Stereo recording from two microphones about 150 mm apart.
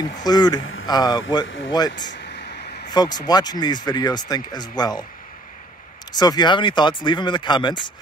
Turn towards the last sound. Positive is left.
turn(degrees=30)  # may be behind; listen again after turning